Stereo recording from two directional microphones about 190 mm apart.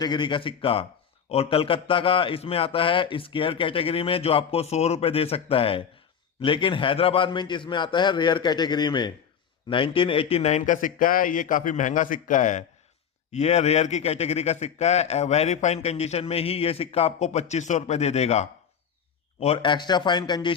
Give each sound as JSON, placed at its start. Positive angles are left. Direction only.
{"t": 0.0, "sound": "a man's voice", "side_deg": 25}